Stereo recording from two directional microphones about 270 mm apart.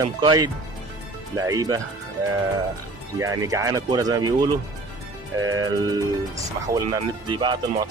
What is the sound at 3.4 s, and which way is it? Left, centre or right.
Speech, centre.